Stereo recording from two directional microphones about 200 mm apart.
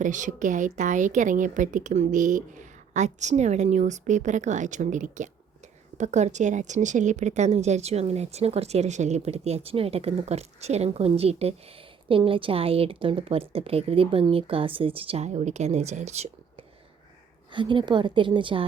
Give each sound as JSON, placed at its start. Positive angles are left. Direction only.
{"t": 0.0, "sound": "a woman's voice", "side_deg": -40}